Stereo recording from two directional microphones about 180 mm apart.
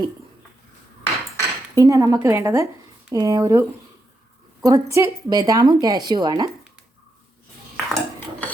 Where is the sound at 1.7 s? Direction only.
20° right (ahead or behind).